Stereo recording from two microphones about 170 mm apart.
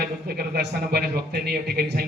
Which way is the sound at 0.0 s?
65° right (ahead or behind).